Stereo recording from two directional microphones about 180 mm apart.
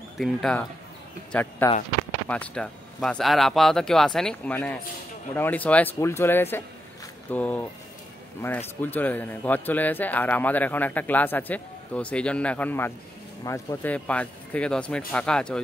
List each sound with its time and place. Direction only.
0.2 s speech: 5° left (ahead or behind)